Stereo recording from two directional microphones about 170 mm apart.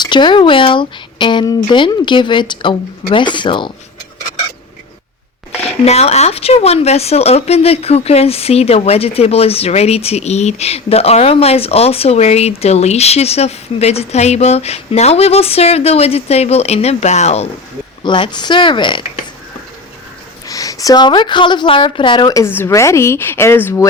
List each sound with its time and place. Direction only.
0.0 s speech: 25° left (ahead or behind)
5.8 s speech: 40° left (ahead or behind)
18.0 s speech: 25° left (ahead or behind)
20.5 s speech: 20° left (ahead or behind)